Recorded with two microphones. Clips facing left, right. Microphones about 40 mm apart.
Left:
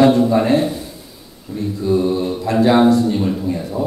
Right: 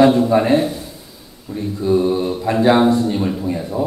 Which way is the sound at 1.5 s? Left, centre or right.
Centre.